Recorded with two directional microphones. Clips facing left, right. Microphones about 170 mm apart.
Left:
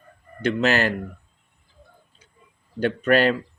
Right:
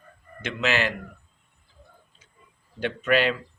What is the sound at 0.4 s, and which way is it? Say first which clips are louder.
Speech: left 5 dB; 40° left (ahead or behind).